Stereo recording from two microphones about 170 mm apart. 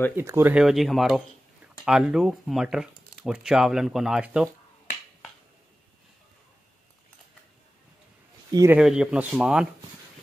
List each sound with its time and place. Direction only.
0.1 s speech: 15° right (ahead or behind)
8.5 s speech: 20° right (ahead or behind)
8.7 s speech: 5° right (ahead or behind)